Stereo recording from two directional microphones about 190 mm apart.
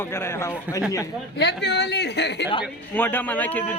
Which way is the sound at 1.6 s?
60° left (ahead or behind).